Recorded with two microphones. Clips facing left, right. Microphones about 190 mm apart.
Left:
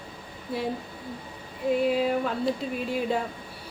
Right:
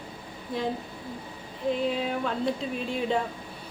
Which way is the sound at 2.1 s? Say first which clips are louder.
Left 2 dB; 5° left (ahead or behind).